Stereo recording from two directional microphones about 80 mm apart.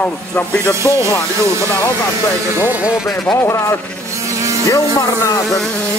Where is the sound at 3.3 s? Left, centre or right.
Left.